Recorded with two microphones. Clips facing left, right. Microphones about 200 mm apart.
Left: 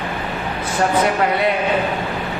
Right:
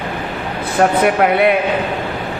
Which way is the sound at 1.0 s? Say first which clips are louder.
Right 5 dB; 60° right (ahead or behind).